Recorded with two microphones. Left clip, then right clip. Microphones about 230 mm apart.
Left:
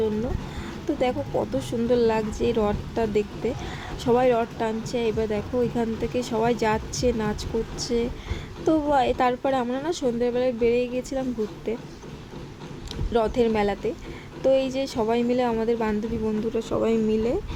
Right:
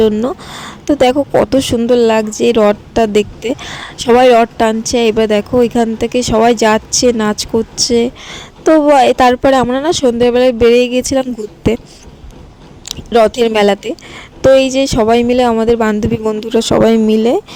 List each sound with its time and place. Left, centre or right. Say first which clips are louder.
0.0 s speech: right 14 dB; right
12.9 s speech: right 14 dB; right